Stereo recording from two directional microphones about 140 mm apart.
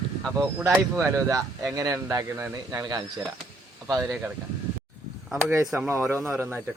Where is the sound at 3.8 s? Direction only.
25° right (ahead or behind).